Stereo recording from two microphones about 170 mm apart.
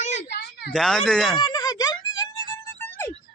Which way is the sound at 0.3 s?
75° left (ahead or behind).